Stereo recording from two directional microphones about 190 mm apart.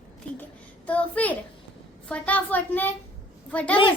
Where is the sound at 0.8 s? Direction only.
5° left (ahead or behind).